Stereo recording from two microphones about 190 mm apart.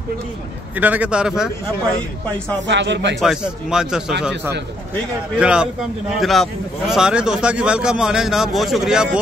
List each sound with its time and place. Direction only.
0.7 s a man's voice: 10° right (ahead or behind)
2.6 s a man's voice: 70° right (ahead or behind)
3.2 s a man's voice: 5° right (ahead or behind)